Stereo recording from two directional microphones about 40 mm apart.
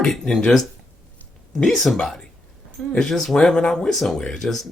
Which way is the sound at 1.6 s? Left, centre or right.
Centre.